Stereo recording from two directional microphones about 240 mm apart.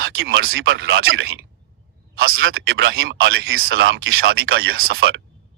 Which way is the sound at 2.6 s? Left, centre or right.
Right.